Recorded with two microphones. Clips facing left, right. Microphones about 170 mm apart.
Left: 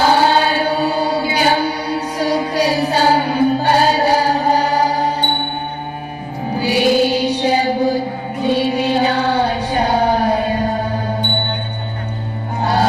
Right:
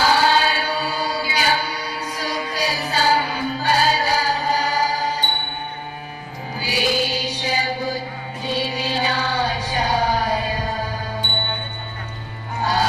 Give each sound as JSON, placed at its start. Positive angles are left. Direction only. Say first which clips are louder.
{"t": 0.0, "sound": "chant", "louder": "left 4 dB", "side_deg": 55}
{"t": 2.5, "sound": "music", "louder": "left 8 dB", "side_deg": 60}
{"t": 6.6, "sound": "music", "louder": "left 9 dB", "side_deg": 55}